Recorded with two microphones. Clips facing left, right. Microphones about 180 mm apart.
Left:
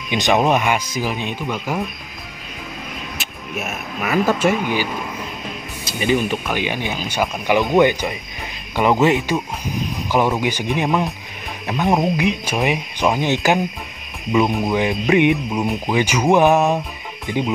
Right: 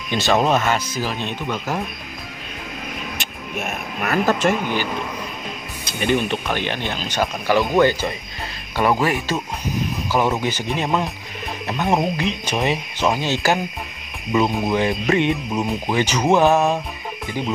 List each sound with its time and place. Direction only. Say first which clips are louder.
0.1 s speech: left 1 dB; 15° left (ahead or behind)
3.2 s speech: even; 5° left (ahead or behind)
5.9 s speech: left 1 dB; 10° left (ahead or behind)
10.4 s speech: left 3 dB; 15° left (ahead or behind)
11.7 s cricket: left 2 dB; centre (ahead or behind)
12.2 s speech: left 3 dB; 15° left (ahead or behind)
16.5 s cricket: left 1 dB; centre (ahead or behind)